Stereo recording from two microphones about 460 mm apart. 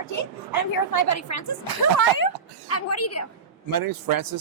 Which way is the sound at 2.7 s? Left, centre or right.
Left.